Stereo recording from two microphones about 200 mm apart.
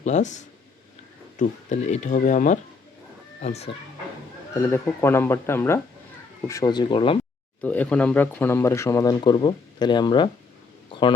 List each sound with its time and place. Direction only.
0.0 s speech: 35° left (ahead or behind)
4.6 s speech: 10° left (ahead or behind)
7.6 s speech: 10° left (ahead or behind); by 10.2 s 25° left (ahead or behind)